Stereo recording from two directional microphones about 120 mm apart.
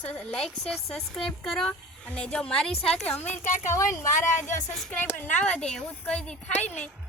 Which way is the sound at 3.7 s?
25° left (ahead or behind).